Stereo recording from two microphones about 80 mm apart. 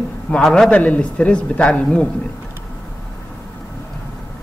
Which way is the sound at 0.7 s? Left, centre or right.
Centre.